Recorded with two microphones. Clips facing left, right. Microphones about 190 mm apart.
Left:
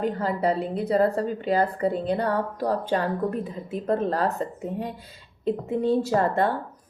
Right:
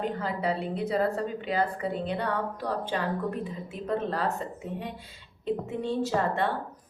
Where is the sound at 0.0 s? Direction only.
40° left (ahead or behind).